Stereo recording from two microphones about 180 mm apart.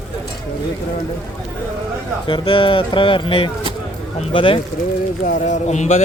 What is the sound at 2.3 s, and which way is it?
Speech, 30° left (ahead or behind).